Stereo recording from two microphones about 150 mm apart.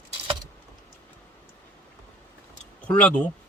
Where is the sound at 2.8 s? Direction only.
10° left (ahead or behind).